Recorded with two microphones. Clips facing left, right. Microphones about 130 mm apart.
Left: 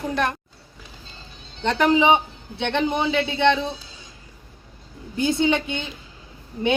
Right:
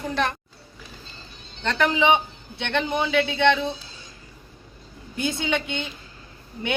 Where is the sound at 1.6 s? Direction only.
15° left (ahead or behind).